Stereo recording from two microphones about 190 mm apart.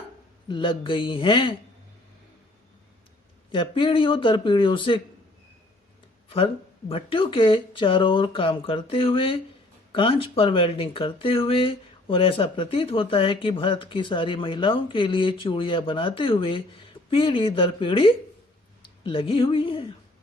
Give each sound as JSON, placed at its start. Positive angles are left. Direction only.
{"t": 0.4, "sound": "speech", "side_deg": 25}
{"t": 3.5, "sound": "speech", "side_deg": 25}
{"t": 6.2, "sound": "speech", "side_deg": 30}